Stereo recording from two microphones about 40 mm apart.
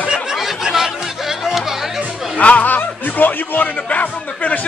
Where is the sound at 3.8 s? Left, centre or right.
Left.